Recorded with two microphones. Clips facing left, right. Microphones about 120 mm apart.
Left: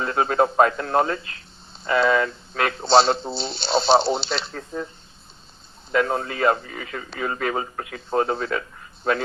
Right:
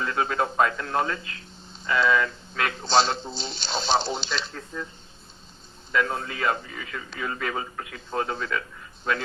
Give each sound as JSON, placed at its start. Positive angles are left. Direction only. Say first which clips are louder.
{"t": 0.0, "sound": "a man's voice", "louder": "left 5 dB", "side_deg": 40}
{"t": 5.9, "sound": "a man's voice", "louder": "left 4 dB", "side_deg": 35}